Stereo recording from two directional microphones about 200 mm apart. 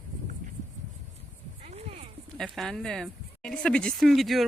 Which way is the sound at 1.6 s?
30° right (ahead or behind).